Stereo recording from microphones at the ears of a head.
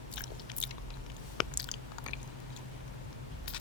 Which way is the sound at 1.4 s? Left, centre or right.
Left.